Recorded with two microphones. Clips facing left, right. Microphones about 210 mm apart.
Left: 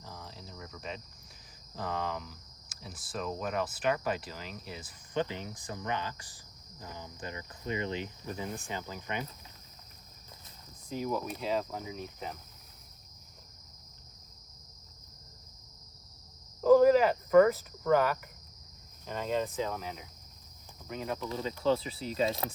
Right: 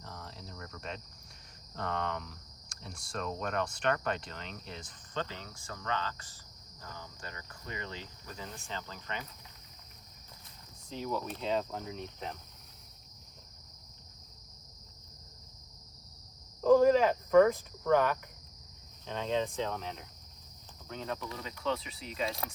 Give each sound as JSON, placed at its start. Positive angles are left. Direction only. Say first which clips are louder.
{"t": 0.0, "sound": "cricket", "louder": "even", "side_deg": 0}
{"t": 1.7, "sound": "speech", "louder": "even", "side_deg": 5}
{"t": 6.8, "sound": "insect", "louder": "left 4 dB", "side_deg": 15}
{"t": 8.6, "sound": "speech", "louder": "left 3 dB", "side_deg": 15}
{"t": 10.8, "sound": "speech", "louder": "left 3 dB", "side_deg": 10}
{"t": 16.6, "sound": "cricket", "louder": "left 2 dB", "side_deg": 5}
{"t": 19.0, "sound": "speech", "louder": "even", "side_deg": 5}
{"t": 21.2, "sound": "speech", "louder": "left 6 dB", "side_deg": 30}